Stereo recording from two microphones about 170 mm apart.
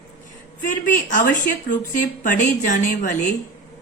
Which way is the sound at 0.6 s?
50° left (ahead or behind).